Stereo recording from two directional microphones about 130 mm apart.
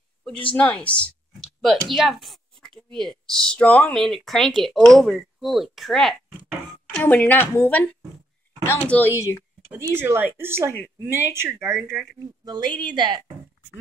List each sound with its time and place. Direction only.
0.5 s speech: 10° left (ahead or behind)
6.9 s a woman's voice: 10° left (ahead or behind)
9.7 s speech: 20° right (ahead or behind)
12.4 s a woman's voice: 35° right (ahead or behind)